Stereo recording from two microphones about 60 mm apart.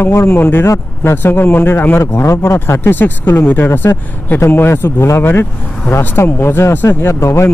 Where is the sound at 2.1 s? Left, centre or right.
Left.